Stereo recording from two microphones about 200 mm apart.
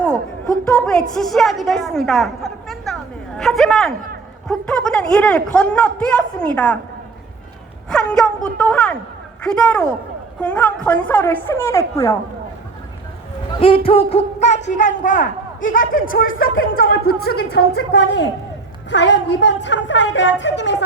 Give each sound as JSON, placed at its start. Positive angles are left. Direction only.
{"t": 0.8, "sound": "a woman's voice", "side_deg": 5}
{"t": 7.9, "sound": "a man's voice", "side_deg": 5}
{"t": 13.6, "sound": "a man's voice", "side_deg": 25}